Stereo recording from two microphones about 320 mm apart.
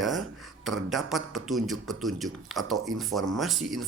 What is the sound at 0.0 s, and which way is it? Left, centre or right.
Speech, centre.